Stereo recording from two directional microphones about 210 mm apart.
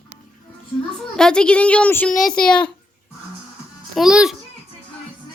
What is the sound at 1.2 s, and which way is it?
A woman's voice, 5° left (ahead or behind).